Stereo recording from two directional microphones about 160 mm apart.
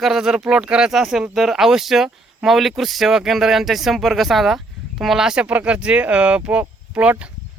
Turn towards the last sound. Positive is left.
turn(degrees=-5)  # may be behind; listen again after turning